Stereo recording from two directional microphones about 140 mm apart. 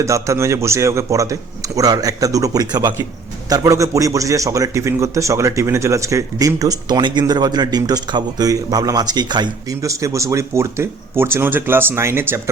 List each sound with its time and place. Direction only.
0.0 s a man's voice: 20° right (ahead or behind)